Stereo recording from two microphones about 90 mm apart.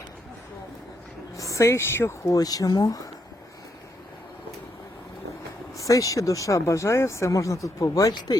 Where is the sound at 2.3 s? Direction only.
45° left (ahead or behind).